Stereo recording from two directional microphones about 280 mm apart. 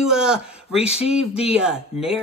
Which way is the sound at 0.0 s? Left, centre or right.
Centre.